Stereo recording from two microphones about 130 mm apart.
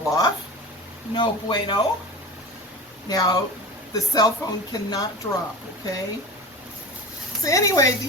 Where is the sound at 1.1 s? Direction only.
35° left (ahead or behind).